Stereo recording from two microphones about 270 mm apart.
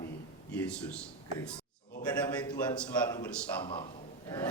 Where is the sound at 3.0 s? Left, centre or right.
Centre.